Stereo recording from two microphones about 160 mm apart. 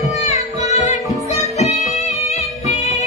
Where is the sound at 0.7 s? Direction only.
45° left (ahead or behind).